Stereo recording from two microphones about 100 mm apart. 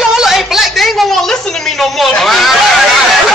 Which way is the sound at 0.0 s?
5° right (ahead or behind).